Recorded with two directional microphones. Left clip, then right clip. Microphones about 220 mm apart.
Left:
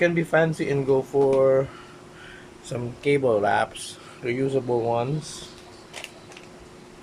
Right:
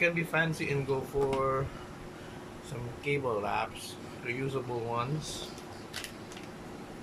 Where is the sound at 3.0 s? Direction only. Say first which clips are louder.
Left 11 dB; 40° left (ahead or behind).